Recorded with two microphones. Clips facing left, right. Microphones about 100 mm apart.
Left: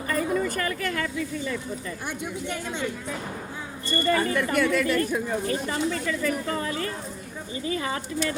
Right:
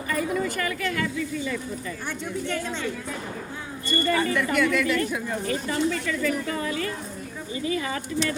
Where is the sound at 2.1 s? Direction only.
15° left (ahead or behind).